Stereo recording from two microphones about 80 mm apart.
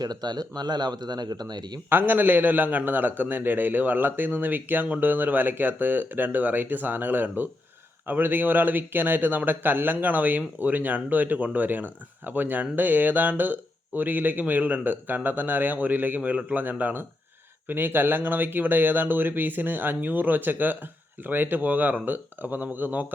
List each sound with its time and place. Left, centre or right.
0.0 s speech: right
1.9 s a man's voice: right